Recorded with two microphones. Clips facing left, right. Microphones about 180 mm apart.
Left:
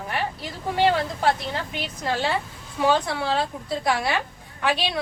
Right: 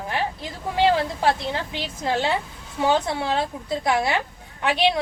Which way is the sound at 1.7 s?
20° right (ahead or behind).